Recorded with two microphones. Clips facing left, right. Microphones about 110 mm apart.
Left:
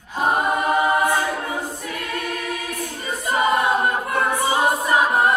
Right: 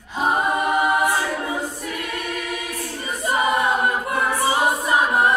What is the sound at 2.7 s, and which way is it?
Choir, 15° left (ahead or behind).